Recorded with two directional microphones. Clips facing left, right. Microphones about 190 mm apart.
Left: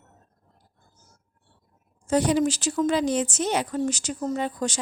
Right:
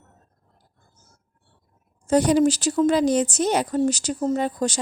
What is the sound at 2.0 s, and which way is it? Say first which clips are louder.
A woman's voice: right 4 dB; 40° right (ahead or behind).